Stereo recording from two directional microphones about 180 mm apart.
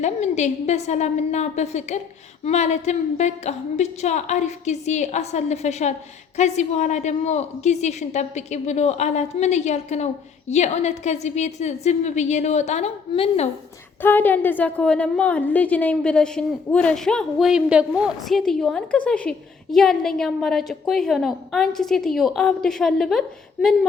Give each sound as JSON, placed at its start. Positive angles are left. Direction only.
{"t": 0.0, "sound": "a woman's voice", "side_deg": 40}
{"t": 14.0, "sound": "a woman's voice", "side_deg": 10}